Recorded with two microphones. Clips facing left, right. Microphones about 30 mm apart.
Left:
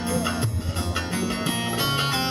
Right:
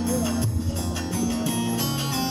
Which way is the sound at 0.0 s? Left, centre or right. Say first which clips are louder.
Right 1 dB; left.